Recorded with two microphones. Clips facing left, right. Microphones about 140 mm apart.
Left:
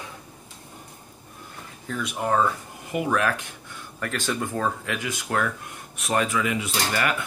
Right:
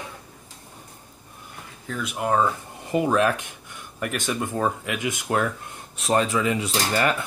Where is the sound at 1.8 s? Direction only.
Centre (ahead or behind).